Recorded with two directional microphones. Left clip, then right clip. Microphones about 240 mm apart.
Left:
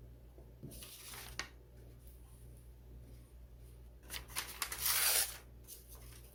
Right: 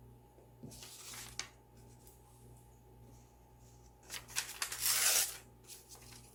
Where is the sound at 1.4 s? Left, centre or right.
Centre.